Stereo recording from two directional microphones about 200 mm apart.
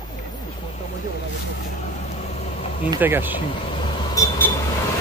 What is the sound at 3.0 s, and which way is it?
Speech, 10° right (ahead or behind).